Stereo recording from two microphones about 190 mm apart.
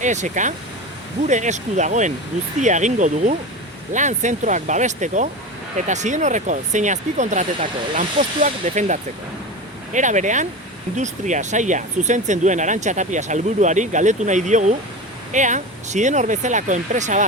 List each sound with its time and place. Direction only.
0.0 s speech: 40° right (ahead or behind)